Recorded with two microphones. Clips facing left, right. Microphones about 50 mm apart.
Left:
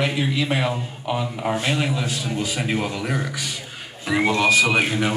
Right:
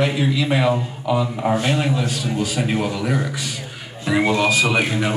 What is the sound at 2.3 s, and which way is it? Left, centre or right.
Speech, centre.